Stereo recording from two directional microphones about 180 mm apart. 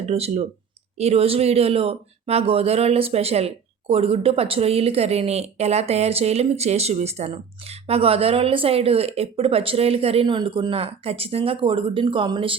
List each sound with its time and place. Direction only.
0.0 s speech: 35° right (ahead or behind)